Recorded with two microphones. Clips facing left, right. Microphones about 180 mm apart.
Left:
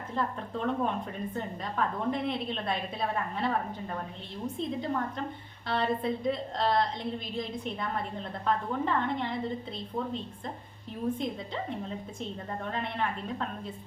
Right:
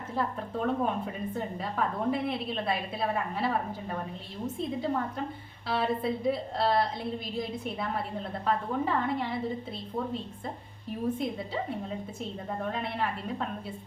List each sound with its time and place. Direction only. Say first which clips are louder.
0.2 s a woman's voice: right 1 dB; 5° right (ahead or behind)
11.2 s a woman's voice: right 2 dB; 5° right (ahead or behind)